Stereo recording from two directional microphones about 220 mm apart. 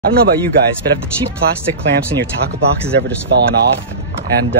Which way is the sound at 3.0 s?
50° right (ahead or behind).